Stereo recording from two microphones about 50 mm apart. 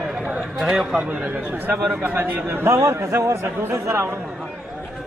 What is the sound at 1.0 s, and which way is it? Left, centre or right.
A man's voice, right.